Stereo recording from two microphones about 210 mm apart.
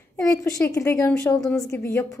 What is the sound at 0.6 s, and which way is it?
A woman's voice, 15° left (ahead or behind).